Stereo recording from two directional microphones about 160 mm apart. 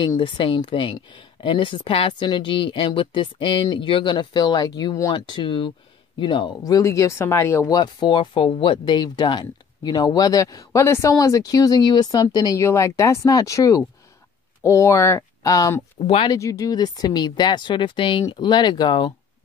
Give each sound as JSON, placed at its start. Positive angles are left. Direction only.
{"t": 0.0, "sound": "speech", "side_deg": 30}
{"t": 16.0, "sound": "speech", "side_deg": 35}
{"t": 16.3, "sound": "speech", "side_deg": 20}